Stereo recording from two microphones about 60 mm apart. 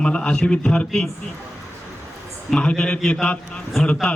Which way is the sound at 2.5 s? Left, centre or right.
Centre.